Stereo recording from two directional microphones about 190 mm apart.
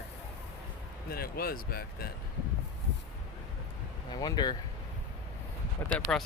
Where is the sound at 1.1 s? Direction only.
50° left (ahead or behind).